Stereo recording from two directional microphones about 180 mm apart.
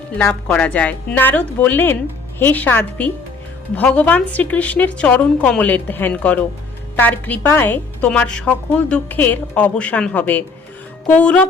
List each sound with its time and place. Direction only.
0.2 s a woman's voice: 5° left (ahead or behind)